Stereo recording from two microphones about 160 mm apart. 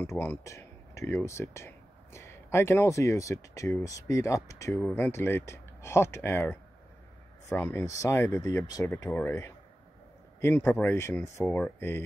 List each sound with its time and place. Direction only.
0.0 s speech: 15° left (ahead or behind)